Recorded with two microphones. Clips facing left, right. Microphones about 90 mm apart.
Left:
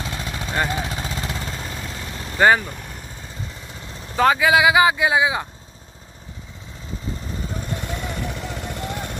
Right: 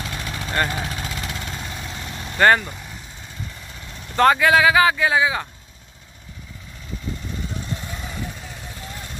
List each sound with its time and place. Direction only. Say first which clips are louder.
0.0 s vehicle: left 1 dB; 25° left (ahead or behind)
2.3 s speech: even; 5° left (ahead or behind)
4.2 s speech: right 1 dB; 5° left (ahead or behind)
7.8 s vehicle: left 4 dB; 70° left (ahead or behind)